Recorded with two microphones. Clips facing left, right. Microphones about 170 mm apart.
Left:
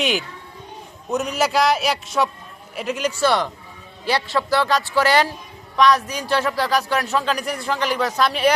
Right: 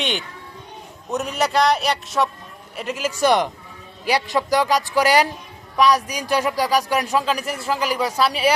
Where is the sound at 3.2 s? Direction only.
15° right (ahead or behind).